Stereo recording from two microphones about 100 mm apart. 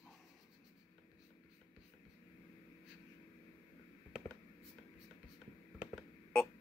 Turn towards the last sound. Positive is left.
turn(degrees=5)  # may be behind; listen again after turning